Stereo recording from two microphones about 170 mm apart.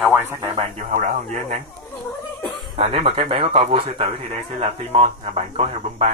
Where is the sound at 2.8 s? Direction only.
35° right (ahead or behind).